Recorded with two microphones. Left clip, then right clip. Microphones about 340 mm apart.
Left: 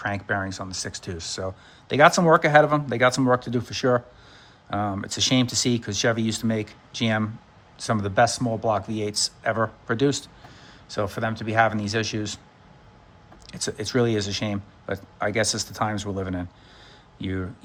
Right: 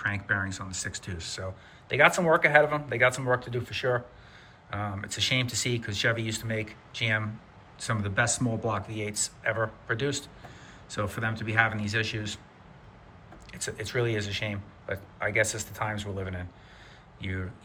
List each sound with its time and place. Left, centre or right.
0.0 s speech: centre
13.5 s speech: centre